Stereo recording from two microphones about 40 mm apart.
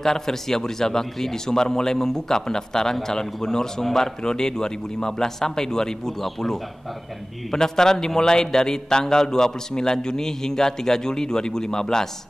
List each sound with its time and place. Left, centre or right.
0.0 s a man's voice: centre